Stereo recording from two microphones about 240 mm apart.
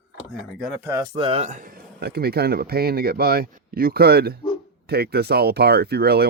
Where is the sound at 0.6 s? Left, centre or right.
Centre.